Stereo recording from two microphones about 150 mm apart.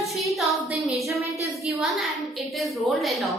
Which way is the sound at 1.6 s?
Centre (ahead or behind).